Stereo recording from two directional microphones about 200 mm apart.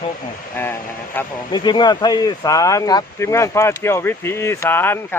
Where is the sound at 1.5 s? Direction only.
20° left (ahead or behind).